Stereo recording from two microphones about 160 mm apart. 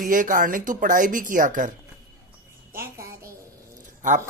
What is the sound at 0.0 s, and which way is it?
Speech, 60° right (ahead or behind).